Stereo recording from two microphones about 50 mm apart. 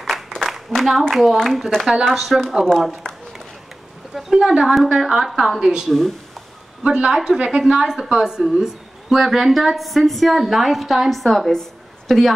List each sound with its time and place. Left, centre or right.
0.0 s a sound: centre
1.1 s a woman's voice: centre
4.1 s a woman's voice: centre
5.9 s a woman's voice: centre
6.8 s a woman's voice: centre